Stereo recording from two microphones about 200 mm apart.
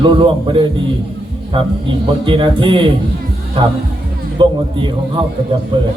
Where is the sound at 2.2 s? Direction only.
25° right (ahead or behind).